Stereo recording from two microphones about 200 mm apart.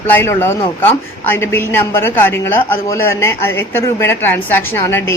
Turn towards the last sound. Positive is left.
turn(degrees=10)  # may be behind; listen again after turning